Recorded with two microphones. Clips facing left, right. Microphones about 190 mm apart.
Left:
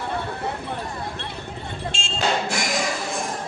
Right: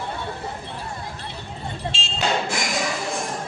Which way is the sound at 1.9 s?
50° left (ahead or behind).